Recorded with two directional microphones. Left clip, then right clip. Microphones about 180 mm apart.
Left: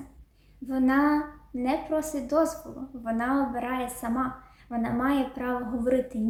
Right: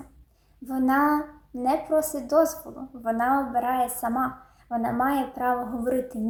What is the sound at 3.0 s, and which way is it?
A woman's voice, 10° left (ahead or behind).